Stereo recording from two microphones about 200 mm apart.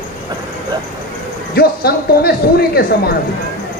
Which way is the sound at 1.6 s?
50° left (ahead or behind).